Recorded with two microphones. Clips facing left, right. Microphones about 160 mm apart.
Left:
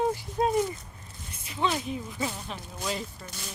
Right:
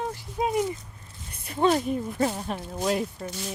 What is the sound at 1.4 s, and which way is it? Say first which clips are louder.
Speech: right 7 dB; 50° right (ahead or behind).